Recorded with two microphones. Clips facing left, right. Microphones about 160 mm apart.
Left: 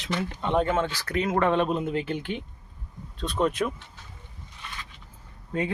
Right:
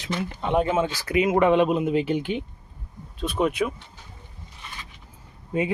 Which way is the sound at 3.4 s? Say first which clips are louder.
Right 2 dB; 5° right (ahead or behind).